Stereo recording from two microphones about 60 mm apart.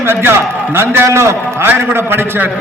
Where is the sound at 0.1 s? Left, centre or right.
Right.